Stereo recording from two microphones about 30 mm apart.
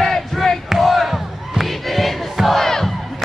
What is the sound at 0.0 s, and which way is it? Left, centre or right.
Battle cry, centre.